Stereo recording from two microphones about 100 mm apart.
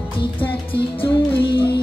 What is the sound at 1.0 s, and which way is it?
Music, 55° left (ahead or behind).